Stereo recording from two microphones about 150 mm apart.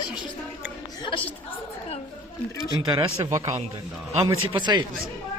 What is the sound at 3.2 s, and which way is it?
Speech, 20° right (ahead or behind).